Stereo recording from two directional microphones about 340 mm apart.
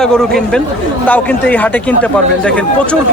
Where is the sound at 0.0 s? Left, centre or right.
Centre.